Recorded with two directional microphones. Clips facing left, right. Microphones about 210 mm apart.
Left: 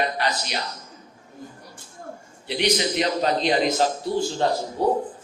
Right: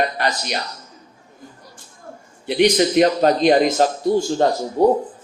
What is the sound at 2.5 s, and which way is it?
A man's voice, 50° right (ahead or behind).